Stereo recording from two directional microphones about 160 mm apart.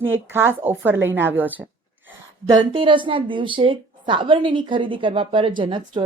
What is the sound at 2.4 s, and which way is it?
A woman's voice, 25° right (ahead or behind).